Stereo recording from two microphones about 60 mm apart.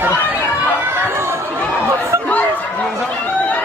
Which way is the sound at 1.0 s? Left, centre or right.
Right.